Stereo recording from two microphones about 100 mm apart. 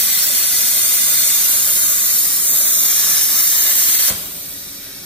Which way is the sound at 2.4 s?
65° right (ahead or behind).